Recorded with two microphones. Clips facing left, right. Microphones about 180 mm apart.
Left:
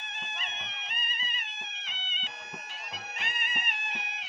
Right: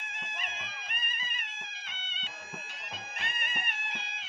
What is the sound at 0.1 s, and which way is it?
Music, 25° left (ahead or behind).